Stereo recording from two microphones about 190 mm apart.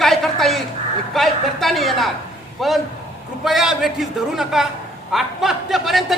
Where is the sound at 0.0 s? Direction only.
Centre (ahead or behind).